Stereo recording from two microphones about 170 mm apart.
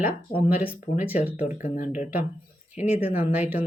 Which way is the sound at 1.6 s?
50° left (ahead or behind).